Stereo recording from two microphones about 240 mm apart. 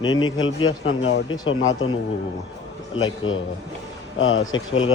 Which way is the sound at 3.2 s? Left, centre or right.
Left.